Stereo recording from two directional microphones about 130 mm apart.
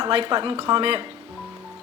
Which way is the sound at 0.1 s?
40° right (ahead or behind).